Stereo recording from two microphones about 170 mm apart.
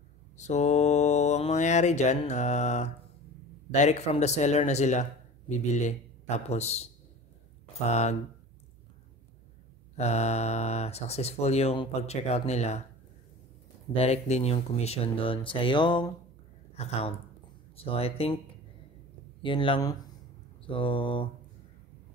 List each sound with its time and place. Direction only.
0.4 s speech: 45° left (ahead or behind)
7.9 s speech: 40° left (ahead or behind)
9.9 s speech: 40° left (ahead or behind)
13.9 s speech: 40° left (ahead or behind)
16.7 s speech: 40° left (ahead or behind)
19.4 s speech: 30° left (ahead or behind)